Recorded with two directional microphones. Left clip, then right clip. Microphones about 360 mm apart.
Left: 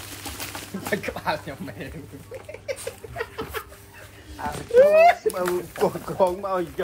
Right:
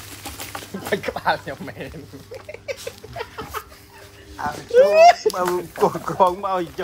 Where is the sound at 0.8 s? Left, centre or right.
Centre.